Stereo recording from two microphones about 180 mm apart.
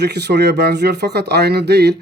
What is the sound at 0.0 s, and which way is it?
Speech, 65° right (ahead or behind).